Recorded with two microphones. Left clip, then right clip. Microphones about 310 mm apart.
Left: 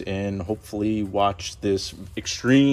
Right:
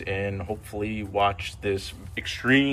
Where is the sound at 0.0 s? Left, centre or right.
Centre.